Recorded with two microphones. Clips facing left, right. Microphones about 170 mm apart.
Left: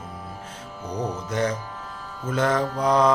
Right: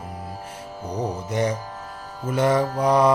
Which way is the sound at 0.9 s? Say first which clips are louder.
Right 1 dB; 10° right (ahead or behind).